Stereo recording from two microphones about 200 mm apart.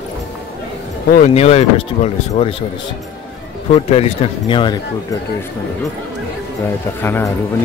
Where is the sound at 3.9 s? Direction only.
30° left (ahead or behind).